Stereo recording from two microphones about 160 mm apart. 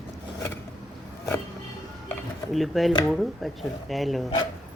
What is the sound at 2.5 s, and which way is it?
Speech, centre (ahead or behind).